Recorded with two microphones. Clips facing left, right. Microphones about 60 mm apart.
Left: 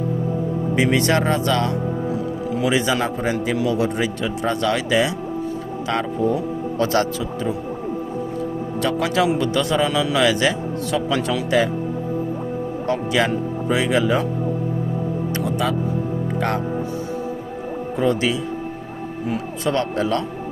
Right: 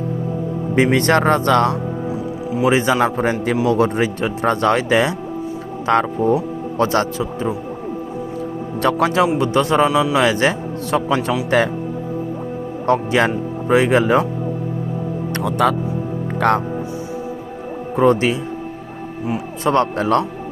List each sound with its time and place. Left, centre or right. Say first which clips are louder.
0.8 s a man's voice: right 4 dB; right
2.6 s a man's voice: right 5 dB; right
6.7 s speech: right 3 dB; right
8.8 s a man's voice: right 6 dB; right
9.4 s speech: right 4 dB; right
9.9 s speech: right 4 dB; centre
10.2 s speech: right 2 dB; right
11.6 s a man's voice: right 2 dB; right
12.8 s speech: right 5 dB; right
15.4 s a man's voice: right 7 dB; right
17.9 s speech: right 5 dB; right
19.6 s speech: right 5 dB; right